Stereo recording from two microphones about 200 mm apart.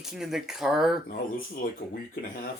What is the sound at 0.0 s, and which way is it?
Speech, centre (ahead or behind).